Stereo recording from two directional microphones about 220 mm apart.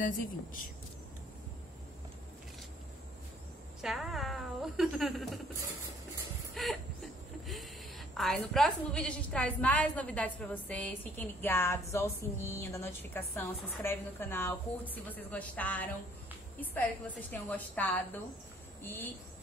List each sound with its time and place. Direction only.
0.0 s speech: 40° left (ahead or behind)
3.8 s speech: centre (ahead or behind)
6.5 s a sound: centre (ahead or behind)
8.1 s a woman's voice: centre (ahead or behind)